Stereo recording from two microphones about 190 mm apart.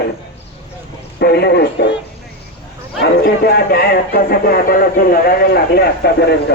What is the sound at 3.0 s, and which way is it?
A man's voice, 55° left (ahead or behind).